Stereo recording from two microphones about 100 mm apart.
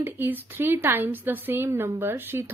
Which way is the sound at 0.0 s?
20° right (ahead or behind).